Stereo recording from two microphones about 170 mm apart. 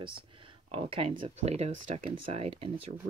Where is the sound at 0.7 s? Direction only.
35° right (ahead or behind).